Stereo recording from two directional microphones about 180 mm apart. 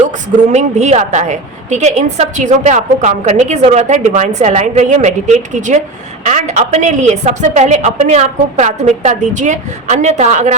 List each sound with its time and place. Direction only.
0.5 s a woman's voice: 40° right (ahead or behind)